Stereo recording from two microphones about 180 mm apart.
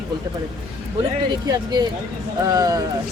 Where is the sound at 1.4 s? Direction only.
25° right (ahead or behind).